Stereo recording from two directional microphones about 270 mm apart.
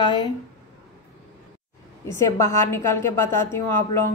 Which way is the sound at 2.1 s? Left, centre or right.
Centre.